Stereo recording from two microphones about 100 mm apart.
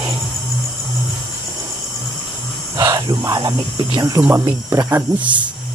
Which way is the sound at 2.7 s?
40° right (ahead or behind).